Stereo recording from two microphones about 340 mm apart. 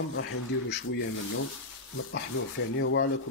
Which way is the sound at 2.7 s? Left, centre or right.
Left.